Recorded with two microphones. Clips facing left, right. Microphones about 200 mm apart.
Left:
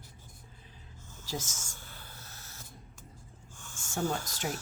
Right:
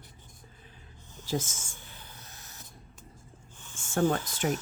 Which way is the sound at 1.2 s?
55° right (ahead or behind).